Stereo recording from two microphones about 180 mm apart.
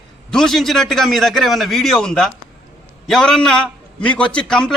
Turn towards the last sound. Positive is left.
turn(degrees=5)  # may be behind; listen again after turning